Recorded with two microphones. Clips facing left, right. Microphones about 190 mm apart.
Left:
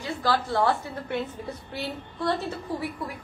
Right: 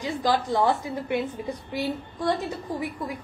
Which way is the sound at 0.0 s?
15° right (ahead or behind).